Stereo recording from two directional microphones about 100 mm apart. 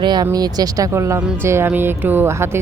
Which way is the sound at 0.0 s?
45° right (ahead or behind).